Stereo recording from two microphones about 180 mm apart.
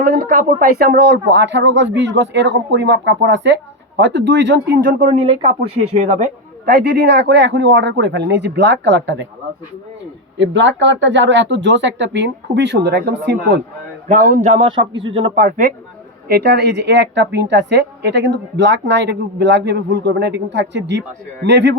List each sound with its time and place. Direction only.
0.0 s speech: 55° right (ahead or behind); by 5.5 s 30° right (ahead or behind)
6.0 s speech: 45° right (ahead or behind); by 9.2 s 80° right
10.3 s speech: 85° right; by 13.3 s 70° right (ahead or behind)
14.1 s a man's voice: 45° right (ahead or behind); by 15.3 s 30° right (ahead or behind)
15.4 s speech: 50° right (ahead or behind)
16.3 s speech: 65° right (ahead or behind)